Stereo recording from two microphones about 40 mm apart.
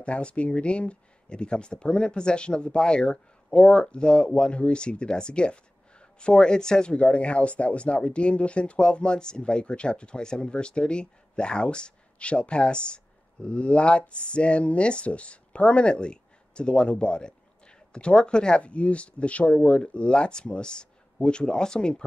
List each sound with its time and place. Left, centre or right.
0.0 s speech: left